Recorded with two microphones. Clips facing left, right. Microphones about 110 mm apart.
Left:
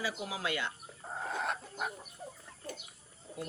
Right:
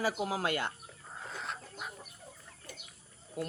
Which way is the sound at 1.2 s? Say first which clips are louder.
Left 6 dB; 55° left (ahead or behind).